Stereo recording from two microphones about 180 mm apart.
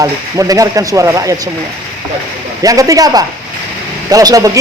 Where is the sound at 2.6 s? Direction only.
20° right (ahead or behind).